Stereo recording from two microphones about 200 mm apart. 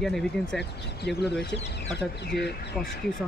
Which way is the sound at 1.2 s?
55° left (ahead or behind).